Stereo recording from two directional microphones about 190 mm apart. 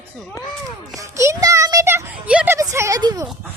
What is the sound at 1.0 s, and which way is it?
A child's voice, 15° right (ahead or behind).